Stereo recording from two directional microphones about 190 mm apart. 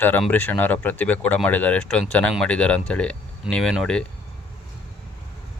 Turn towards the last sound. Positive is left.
turn(degrees=5)  # may be behind; listen again after turning